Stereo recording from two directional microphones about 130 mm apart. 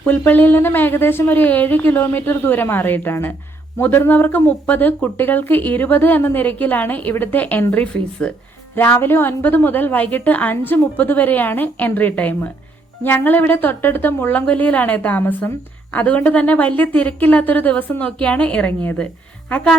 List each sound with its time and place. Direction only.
0.0 s speech: 15° left (ahead or behind)